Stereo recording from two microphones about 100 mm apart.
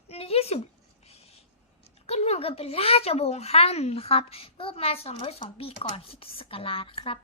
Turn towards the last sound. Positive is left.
turn(degrees=65)  # may be behind; listen again after turning